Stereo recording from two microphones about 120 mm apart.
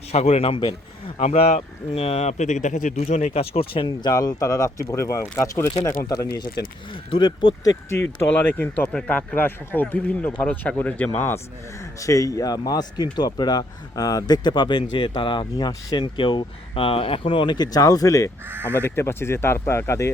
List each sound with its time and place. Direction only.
0.1 s speech: 60° left (ahead or behind); by 1.1 s 45° left (ahead or behind)
1.2 s speech: 70° left (ahead or behind); by 6.5 s 30° left (ahead or behind)
6.9 s speech: 45° left (ahead or behind)
7.6 s a man's voice: 25° left (ahead or behind)
18.4 s speech: 15° right (ahead or behind)
18.7 s speech: 20° left (ahead or behind)